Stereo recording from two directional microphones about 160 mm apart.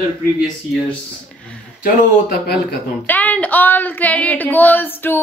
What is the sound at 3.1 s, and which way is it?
Speech, 10° left (ahead or behind).